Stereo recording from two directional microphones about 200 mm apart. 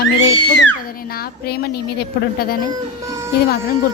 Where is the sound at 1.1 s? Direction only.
50° left (ahead or behind).